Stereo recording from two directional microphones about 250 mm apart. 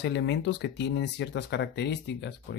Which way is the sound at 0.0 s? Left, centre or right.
Left.